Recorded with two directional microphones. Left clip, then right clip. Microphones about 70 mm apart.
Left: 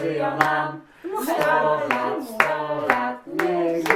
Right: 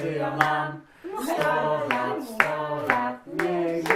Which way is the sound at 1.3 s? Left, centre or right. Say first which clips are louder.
Left 4 dB; centre.